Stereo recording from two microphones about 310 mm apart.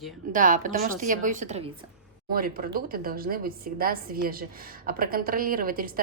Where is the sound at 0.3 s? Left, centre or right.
Right.